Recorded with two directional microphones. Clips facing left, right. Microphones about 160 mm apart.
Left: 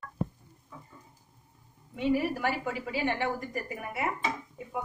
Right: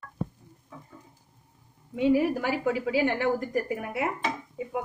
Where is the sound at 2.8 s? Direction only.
90° right.